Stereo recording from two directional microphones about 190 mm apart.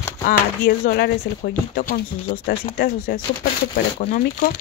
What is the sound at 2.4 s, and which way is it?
Speech, 50° left (ahead or behind).